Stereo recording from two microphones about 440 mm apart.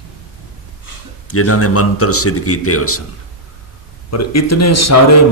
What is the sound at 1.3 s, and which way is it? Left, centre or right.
Speech, left.